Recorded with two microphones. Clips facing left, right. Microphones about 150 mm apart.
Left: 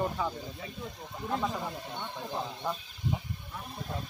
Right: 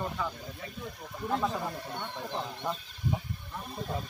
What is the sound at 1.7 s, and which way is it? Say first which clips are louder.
Speech: right 1 dB; 20° left (ahead or behind).